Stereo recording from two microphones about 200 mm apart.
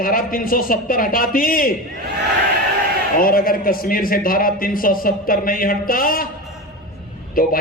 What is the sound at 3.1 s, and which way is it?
A man's voice, 45° left (ahead or behind).